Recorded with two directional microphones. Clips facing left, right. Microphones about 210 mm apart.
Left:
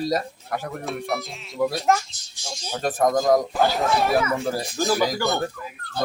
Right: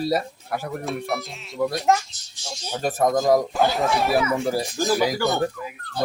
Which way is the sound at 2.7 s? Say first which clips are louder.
Even; centre (ahead or behind).